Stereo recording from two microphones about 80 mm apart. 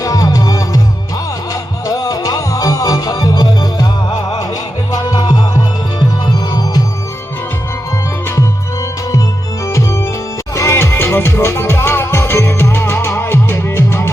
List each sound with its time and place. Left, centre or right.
0.0 s music: left
1.9 s music: left
4.9 s music: left
9.6 s music: left